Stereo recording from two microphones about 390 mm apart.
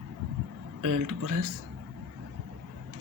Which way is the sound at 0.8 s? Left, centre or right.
Right.